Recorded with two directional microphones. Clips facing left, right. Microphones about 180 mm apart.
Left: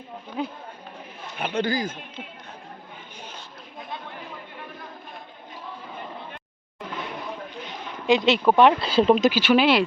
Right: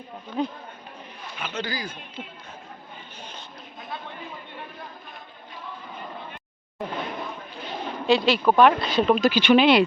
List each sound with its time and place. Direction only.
0.4 s speech: 5° left (ahead or behind)
1.4 s a man's voice: 55° left (ahead or behind)
8.0 s speech: 20° left (ahead or behind)
9.3 s speech: 5° left (ahead or behind)